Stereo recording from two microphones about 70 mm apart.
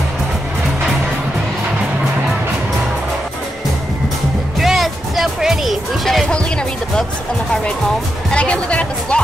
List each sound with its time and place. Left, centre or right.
4.6 s music: centre
8.3 s speech: centre